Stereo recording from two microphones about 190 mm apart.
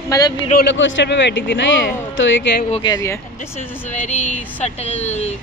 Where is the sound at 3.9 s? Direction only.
40° left (ahead or behind).